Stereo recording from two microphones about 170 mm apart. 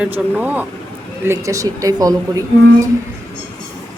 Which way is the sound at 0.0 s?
10° right (ahead or behind).